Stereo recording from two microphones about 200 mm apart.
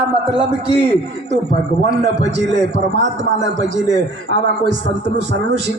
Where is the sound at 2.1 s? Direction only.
60° right (ahead or behind).